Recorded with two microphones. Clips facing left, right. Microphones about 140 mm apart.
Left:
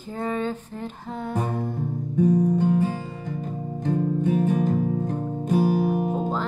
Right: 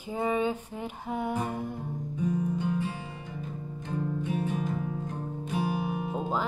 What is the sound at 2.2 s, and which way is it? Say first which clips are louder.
Guitar: left 10 dB; 45° left (ahead or behind).